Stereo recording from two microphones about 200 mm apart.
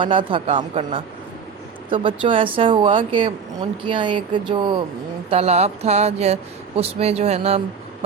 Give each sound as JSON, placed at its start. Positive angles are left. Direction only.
{"t": 0.0, "sound": "speech", "side_deg": -25}
{"t": 1.9, "sound": "speech", "side_deg": -25}